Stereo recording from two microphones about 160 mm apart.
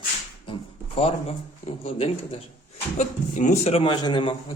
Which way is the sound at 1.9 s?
35° left (ahead or behind).